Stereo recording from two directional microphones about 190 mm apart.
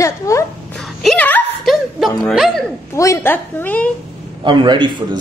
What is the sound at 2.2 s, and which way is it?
Speech, centre (ahead or behind).